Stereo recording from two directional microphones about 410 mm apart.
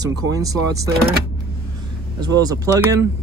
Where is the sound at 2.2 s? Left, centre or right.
Centre.